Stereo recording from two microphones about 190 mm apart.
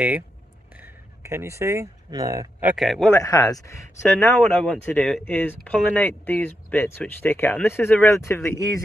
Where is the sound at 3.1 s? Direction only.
20° left (ahead or behind).